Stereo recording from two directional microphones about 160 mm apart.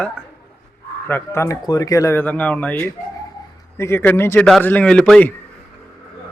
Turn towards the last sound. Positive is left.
turn(degrees=5)  # may be behind; listen again after turning